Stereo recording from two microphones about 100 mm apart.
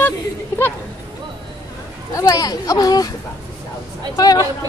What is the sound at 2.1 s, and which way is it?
Speech, 35° left (ahead or behind).